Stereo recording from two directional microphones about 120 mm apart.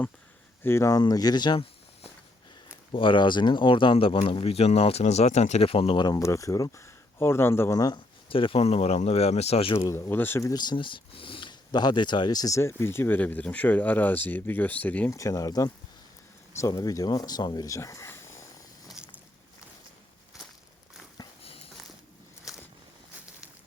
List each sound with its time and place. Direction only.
0.6 s speech: 20° left (ahead or behind); by 1.6 s 35° left (ahead or behind)
2.9 s speech: 45° left (ahead or behind)
6.0 s speech: 30° left (ahead or behind)
7.9 s speech: 45° left (ahead or behind)
9.7 s speech: 25° left (ahead or behind)
10.5 s speech: 35° left (ahead or behind); by 15.1 s 15° left (ahead or behind)
15.1 s speech: 25° left (ahead or behind)
19.0 s walk: 5° right (ahead or behind)
21.2 s a sound: 35° left (ahead or behind)
22.5 s boat: 5° right (ahead or behind)